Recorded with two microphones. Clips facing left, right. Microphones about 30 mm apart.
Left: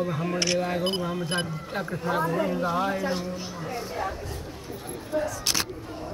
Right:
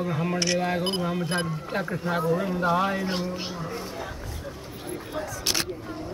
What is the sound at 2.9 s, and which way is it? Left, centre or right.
Speech, right.